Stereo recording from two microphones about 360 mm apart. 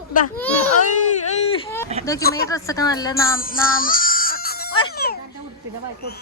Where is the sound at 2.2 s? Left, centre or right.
Left.